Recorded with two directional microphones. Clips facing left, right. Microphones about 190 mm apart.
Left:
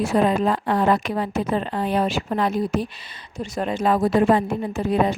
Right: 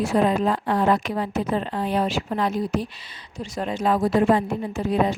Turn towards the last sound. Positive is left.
turn(degrees=60)  # may be behind; listen again after turning